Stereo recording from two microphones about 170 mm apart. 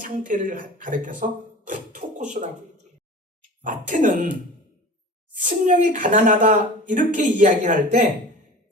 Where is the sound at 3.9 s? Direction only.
50° right (ahead or behind).